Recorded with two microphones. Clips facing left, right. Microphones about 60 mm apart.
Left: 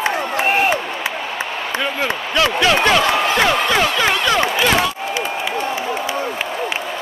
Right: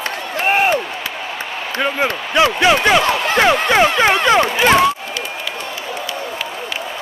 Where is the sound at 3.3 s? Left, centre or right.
Right.